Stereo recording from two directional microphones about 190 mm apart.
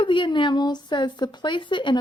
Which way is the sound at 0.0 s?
25° left (ahead or behind).